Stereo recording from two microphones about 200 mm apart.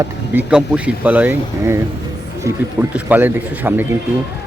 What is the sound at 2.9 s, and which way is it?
Speech, 10° right (ahead or behind).